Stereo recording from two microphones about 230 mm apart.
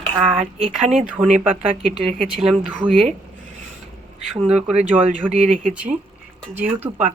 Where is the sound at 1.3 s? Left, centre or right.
Right.